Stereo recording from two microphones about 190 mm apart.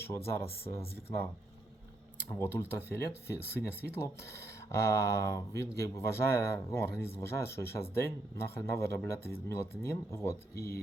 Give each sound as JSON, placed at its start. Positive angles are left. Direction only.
{"t": 2.3, "sound": "speech", "side_deg": 10}
{"t": 10.5, "sound": "speech", "side_deg": 55}